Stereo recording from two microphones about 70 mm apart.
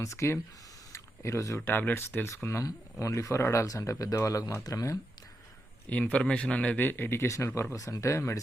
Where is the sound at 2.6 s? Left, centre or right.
Left.